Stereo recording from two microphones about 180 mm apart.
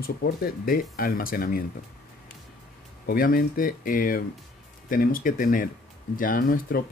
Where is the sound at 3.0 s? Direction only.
55° left (ahead or behind).